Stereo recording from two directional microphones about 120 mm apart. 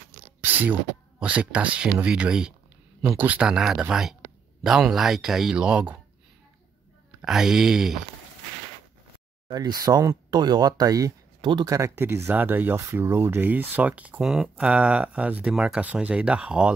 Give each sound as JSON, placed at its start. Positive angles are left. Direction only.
{"t": 0.4, "sound": "a sound", "side_deg": -15}
{"t": 1.2, "sound": "speech", "side_deg": -10}
{"t": 7.2, "sound": "speech", "side_deg": -5}
{"t": 9.5, "sound": "speech", "side_deg": -35}